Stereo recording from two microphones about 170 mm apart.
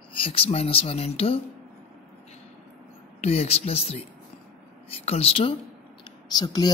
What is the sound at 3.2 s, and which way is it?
Speech, 35° left (ahead or behind).